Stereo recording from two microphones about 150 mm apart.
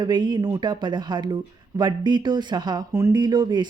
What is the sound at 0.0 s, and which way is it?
Speech, 30° right (ahead or behind).